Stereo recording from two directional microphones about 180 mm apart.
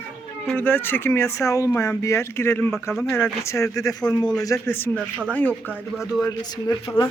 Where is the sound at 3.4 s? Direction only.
15° left (ahead or behind).